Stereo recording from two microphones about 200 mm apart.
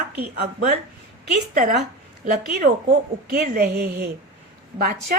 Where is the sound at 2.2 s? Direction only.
45° right (ahead or behind).